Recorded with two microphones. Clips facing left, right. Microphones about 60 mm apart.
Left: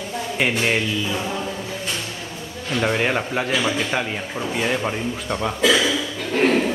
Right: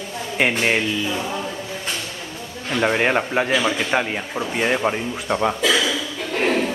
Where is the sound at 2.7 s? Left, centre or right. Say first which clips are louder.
Right 2 dB; centre.